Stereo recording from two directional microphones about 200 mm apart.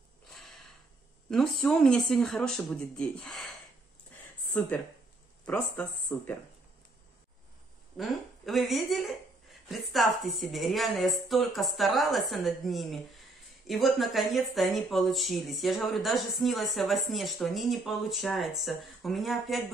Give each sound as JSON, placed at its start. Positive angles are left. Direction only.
{"t": 0.3, "sound": "snort", "side_deg": 0}
{"t": 1.3, "sound": "speech", "side_deg": 0}
{"t": 5.4, "sound": "speech", "side_deg": 5}
{"t": 8.0, "sound": "speech", "side_deg": 0}